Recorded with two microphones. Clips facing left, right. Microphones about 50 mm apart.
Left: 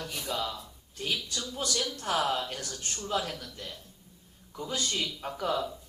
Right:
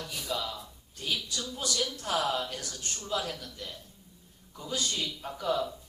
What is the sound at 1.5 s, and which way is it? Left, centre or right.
A man's voice, left.